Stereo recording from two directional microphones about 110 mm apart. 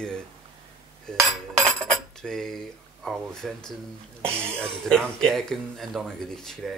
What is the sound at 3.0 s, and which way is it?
Speech, centre (ahead or behind).